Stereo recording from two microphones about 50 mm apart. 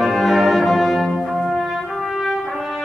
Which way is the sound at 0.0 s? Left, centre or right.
Centre.